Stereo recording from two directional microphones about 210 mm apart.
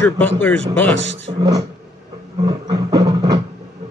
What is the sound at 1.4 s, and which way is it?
Speech, 20° right (ahead or behind).